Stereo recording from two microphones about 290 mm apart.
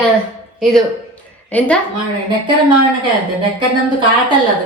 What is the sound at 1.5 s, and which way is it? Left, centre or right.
Speech, centre.